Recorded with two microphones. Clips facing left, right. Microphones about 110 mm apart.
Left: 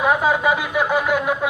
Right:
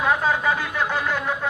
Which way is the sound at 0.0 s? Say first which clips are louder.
Left 3 dB; 10° left (ahead or behind).